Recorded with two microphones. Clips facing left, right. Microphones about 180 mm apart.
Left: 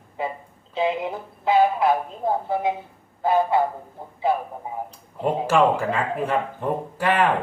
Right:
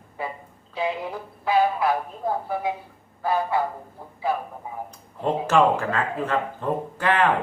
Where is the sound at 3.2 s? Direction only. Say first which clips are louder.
Left 4 dB; 20° left (ahead or behind).